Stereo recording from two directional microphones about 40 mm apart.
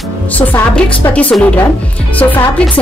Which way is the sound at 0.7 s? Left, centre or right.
Left.